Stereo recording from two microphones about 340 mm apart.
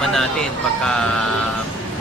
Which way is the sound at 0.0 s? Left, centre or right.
Centre.